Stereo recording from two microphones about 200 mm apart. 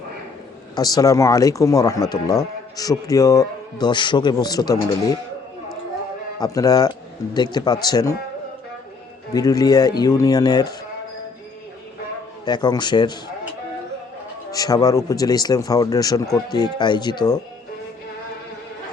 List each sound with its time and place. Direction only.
0.8 s speech: 20° left (ahead or behind)
6.4 s speech: 20° left (ahead or behind)
9.3 s speech: 20° left (ahead or behind)
12.5 s speech: 20° left (ahead or behind)
14.5 s speech: 20° left (ahead or behind)